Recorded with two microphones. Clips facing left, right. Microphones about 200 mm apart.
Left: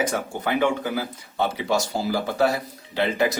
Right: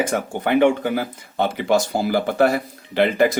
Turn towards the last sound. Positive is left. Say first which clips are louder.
# right 5 dB
turn(degrees=-55)  # may be behind; listen again after turning